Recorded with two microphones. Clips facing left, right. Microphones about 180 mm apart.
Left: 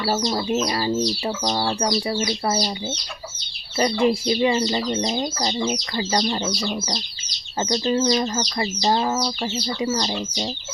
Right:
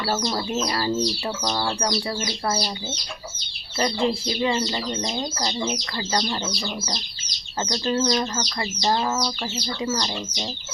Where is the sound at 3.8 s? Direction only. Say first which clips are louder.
Left 4 dB; 15° left (ahead or behind).